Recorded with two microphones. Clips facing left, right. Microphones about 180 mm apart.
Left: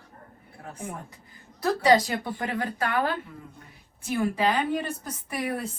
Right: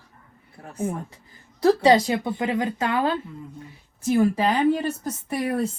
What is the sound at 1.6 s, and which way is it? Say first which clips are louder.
Speech: right 4 dB; 25° right (ahead or behind).